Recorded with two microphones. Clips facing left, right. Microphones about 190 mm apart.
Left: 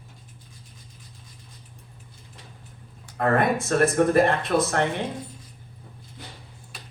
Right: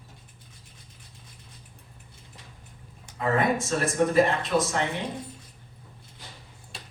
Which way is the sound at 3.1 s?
60° left (ahead or behind).